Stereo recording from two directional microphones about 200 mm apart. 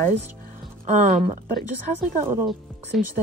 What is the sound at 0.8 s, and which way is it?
Speech, 40° right (ahead or behind).